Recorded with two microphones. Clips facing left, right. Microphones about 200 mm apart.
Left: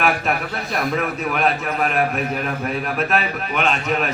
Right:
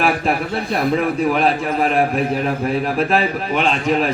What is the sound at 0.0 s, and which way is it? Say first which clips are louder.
A man's voice: right 3 dB; 30° right (ahead or behind).